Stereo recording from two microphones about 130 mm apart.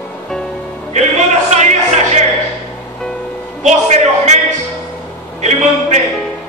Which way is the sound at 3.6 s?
60° right (ahead or behind).